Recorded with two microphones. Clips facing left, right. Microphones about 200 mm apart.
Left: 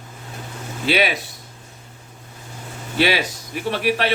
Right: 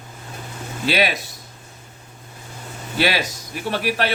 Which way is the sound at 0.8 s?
40° right (ahead or behind).